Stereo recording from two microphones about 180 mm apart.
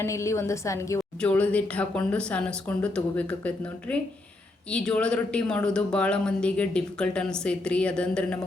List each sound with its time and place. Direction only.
0.0 s speech: 15° left (ahead or behind)